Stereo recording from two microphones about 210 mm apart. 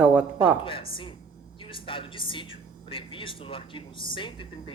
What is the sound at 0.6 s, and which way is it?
A woman's voice, 25° left (ahead or behind).